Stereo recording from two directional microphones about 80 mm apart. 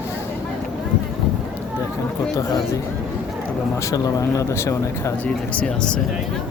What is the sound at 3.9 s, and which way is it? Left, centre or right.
Speech, left.